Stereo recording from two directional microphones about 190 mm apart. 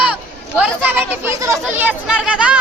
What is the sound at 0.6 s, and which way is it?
Speech, 10° right (ahead or behind).